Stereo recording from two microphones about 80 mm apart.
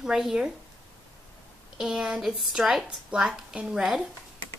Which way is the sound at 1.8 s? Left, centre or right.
Centre.